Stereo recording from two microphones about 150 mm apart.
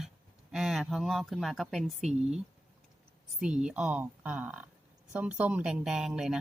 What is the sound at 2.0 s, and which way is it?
Speech, 45° right (ahead or behind).